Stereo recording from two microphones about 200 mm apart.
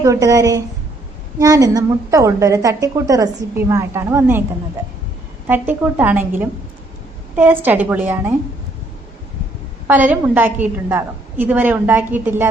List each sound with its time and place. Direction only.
0.0 s a woman's voice: 15° right (ahead or behind)
5.5 s a woman's voice: 10° right (ahead or behind)
9.8 s a woman's voice: 10° right (ahead or behind)